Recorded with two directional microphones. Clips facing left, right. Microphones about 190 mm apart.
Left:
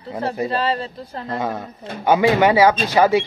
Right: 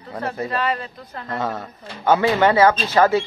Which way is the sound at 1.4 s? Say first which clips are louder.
Left 1 dB; 15° left (ahead or behind).